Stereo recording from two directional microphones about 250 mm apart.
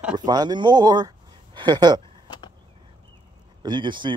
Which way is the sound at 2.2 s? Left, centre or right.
Centre.